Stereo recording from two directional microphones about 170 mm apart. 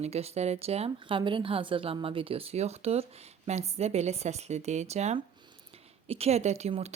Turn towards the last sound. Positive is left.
turn(degrees=-40)  # may be behind; listen again after turning